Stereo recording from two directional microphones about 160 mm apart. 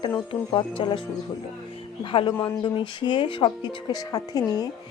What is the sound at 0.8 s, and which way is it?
Speech, 35° left (ahead or behind).